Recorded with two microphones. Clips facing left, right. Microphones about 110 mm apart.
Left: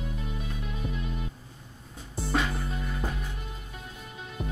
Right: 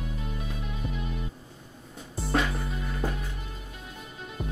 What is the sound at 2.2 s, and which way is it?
Music, centre (ahead or behind).